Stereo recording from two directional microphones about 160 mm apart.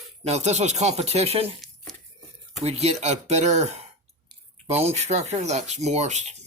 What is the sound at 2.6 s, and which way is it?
Speech, 40° right (ahead or behind).